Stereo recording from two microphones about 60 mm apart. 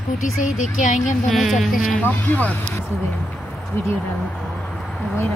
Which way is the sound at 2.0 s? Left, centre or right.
Left.